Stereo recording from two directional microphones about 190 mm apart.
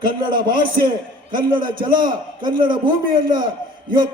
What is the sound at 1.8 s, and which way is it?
A man's voice, 25° right (ahead or behind).